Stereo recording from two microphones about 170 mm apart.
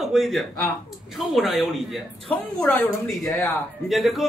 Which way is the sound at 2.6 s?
10° left (ahead or behind).